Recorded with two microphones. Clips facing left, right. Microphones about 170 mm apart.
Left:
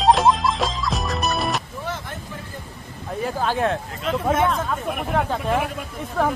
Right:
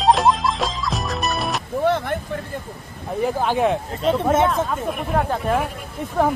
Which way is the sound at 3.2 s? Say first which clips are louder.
Right 3 dB; 15° right (ahead or behind).